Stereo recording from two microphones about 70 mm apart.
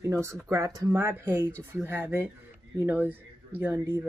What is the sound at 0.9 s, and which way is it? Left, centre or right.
Speech, right.